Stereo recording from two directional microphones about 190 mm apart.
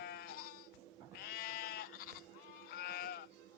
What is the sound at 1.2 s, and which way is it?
Sheep, 55° left (ahead or behind).